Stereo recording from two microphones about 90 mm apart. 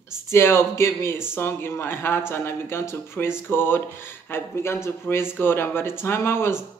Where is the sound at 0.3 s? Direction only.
30° left (ahead or behind).